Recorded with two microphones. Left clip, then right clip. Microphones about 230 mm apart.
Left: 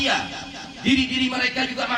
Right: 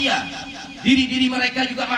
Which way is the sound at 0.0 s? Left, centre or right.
Right.